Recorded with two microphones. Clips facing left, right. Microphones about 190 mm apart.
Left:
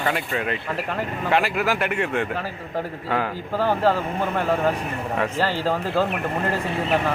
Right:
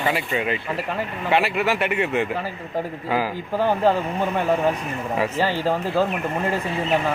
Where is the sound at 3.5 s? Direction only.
15° right (ahead or behind).